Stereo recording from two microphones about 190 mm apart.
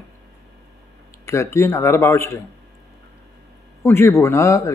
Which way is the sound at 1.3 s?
15° left (ahead or behind).